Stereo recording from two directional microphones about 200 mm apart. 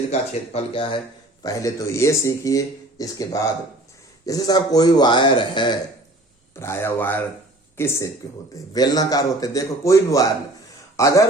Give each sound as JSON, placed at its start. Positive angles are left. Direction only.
{"t": 0.1, "sound": "speech", "side_deg": 30}
{"t": 6.6, "sound": "a man's voice", "side_deg": 10}